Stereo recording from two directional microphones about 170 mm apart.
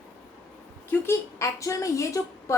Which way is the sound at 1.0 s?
15° left (ahead or behind).